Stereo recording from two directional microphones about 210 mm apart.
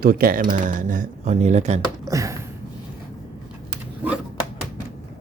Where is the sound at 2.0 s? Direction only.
15° right (ahead or behind).